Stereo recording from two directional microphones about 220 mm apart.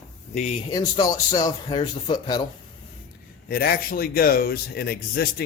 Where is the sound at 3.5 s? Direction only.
45° left (ahead or behind).